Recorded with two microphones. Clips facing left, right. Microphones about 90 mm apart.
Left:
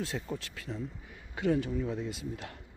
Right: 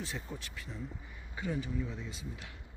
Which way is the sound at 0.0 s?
85° left.